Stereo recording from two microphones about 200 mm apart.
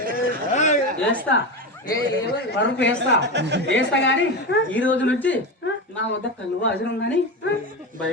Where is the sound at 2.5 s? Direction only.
60° left (ahead or behind).